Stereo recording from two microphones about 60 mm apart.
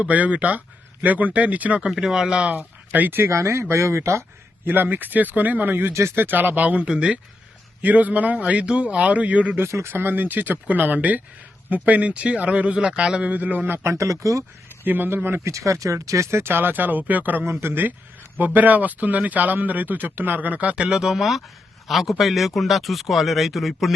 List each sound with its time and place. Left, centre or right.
0.0 s speech: right
2.0 s speech: centre
2.5 s speech: right
3.2 s speech: right
4.6 s speech: right
5.9 s speech: right
6.1 s speech: right; by 7.2 s centre
7.8 s speech: right
9.6 s speech: right
9.9 s speech: right
13.8 s speech: right
14.8 s speech: right
15.4 s speech: right
17.4 s speech: right; by 23.9 s centre